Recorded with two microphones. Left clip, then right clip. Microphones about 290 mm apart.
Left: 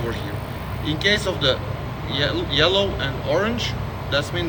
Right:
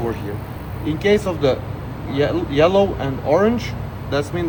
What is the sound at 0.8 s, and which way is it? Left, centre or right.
Speech, right.